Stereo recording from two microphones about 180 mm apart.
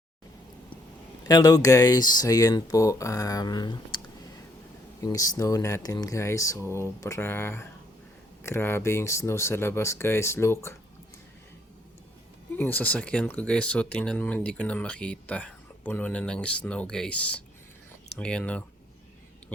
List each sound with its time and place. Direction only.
1.3 s speech: 20° left (ahead or behind)
5.0 s speech: 20° left (ahead or behind)
12.5 s speech: 10° left (ahead or behind)